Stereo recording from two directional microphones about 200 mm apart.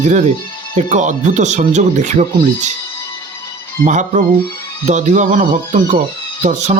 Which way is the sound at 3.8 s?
40° right (ahead or behind).